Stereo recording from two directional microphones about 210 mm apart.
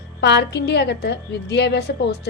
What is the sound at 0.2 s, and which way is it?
A woman's voice, 55° left (ahead or behind).